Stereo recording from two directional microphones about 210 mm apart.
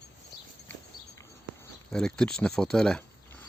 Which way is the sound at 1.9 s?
Centre (ahead or behind).